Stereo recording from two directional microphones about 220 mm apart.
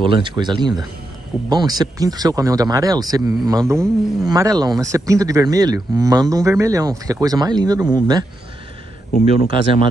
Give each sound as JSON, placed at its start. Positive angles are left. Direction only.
{"t": 0.0, "sound": "speech", "side_deg": -20}
{"t": 9.1, "sound": "speech", "side_deg": 40}